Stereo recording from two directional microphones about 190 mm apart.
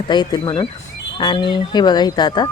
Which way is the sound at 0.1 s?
20° left (ahead or behind).